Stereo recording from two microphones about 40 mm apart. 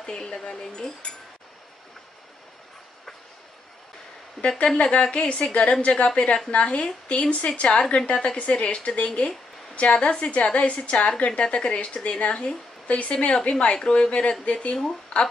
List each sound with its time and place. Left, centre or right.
0.0 s speech: centre
4.4 s a woman's voice: left
13.1 s a woman's voice: left